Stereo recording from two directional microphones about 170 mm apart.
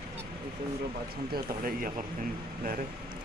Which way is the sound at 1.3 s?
55° right (ahead or behind).